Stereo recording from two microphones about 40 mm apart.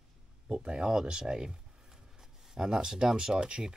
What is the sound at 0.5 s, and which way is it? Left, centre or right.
Speech, right.